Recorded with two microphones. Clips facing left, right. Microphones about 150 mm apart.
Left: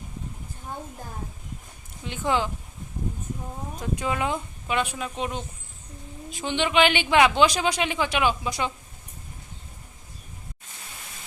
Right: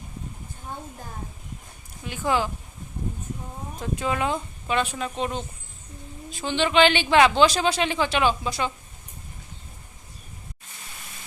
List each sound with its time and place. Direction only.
2.0 s speech: 20° left (ahead or behind)
3.8 s speech: 15° left (ahead or behind)
6.4 s speech: 15° left (ahead or behind)